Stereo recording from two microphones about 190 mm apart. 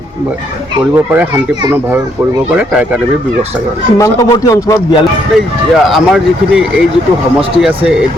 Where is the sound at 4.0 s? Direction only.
20° left (ahead or behind).